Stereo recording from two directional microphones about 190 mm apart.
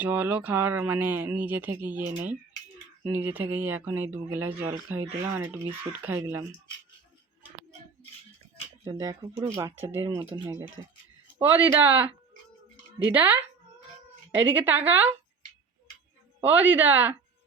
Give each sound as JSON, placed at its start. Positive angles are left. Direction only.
{"t": 0.0, "sound": "speech", "side_deg": -10}
{"t": 3.1, "sound": "speech", "side_deg": -10}
{"t": 8.8, "sound": "speech", "side_deg": -20}
{"t": 11.3, "sound": "speech", "side_deg": -10}
{"t": 16.4, "sound": "speech", "side_deg": -10}